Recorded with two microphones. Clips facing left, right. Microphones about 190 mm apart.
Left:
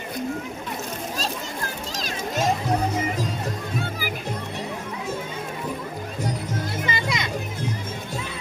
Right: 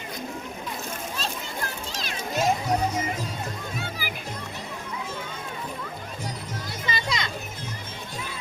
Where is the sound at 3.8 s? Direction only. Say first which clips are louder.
Left 5 dB; 50° left (ahead or behind).